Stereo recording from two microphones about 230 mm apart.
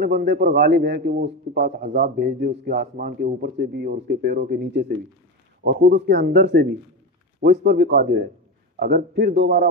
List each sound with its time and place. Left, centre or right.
0.0 s speech: right